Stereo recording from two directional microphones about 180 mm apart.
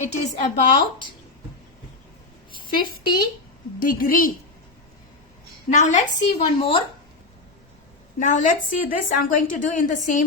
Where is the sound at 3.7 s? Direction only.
50° left (ahead or behind).